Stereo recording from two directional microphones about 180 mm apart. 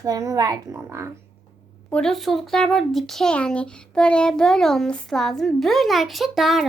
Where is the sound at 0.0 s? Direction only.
20° right (ahead or behind).